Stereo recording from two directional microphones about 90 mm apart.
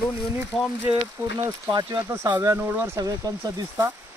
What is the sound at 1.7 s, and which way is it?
Speech, 45° right (ahead or behind).